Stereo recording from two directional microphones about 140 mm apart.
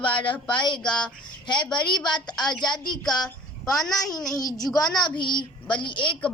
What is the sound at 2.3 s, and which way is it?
A woman's voice, 5° left (ahead or behind).